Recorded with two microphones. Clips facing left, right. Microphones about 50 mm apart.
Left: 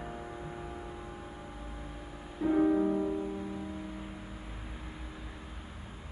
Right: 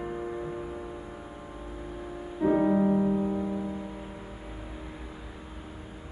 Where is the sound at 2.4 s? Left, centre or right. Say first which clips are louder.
Right 3 dB; right.